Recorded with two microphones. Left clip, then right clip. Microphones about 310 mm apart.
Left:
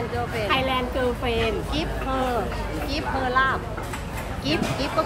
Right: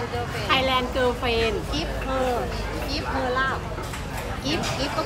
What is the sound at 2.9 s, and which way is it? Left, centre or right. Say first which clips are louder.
Speech: left 3 dB; left.